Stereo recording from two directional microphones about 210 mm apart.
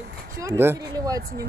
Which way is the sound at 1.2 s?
45° right (ahead or behind).